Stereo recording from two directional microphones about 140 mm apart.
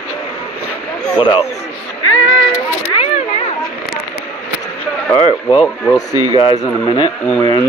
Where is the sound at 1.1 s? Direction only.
35° left (ahead or behind).